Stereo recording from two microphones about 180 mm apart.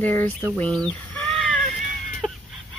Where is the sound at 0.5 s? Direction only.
5° left (ahead or behind).